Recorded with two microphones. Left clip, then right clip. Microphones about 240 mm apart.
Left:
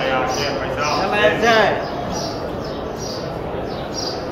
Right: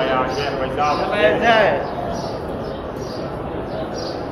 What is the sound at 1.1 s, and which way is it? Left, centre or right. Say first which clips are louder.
Speech: even; left.